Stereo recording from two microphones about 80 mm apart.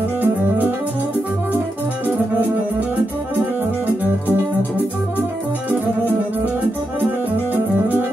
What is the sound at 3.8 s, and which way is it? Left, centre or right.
Music, right.